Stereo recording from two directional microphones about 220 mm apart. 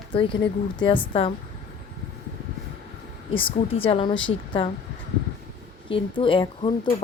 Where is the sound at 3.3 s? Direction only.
25° left (ahead or behind).